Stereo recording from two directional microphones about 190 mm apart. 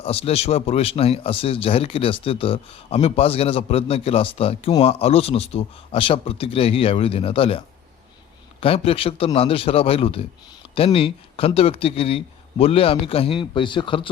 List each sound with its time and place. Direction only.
0.0 s speech: 30° left (ahead or behind)
8.6 s speech: 30° left (ahead or behind)